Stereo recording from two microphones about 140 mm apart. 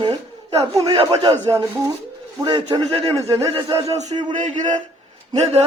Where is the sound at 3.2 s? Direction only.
25° right (ahead or behind).